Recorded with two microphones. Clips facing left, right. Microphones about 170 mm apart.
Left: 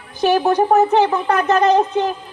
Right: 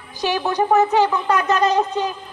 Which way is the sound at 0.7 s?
55° left (ahead or behind).